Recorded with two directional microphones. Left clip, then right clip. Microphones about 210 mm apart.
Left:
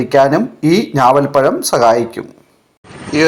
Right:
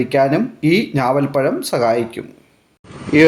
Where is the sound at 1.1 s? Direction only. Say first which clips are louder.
Left 7 dB; 5° left (ahead or behind).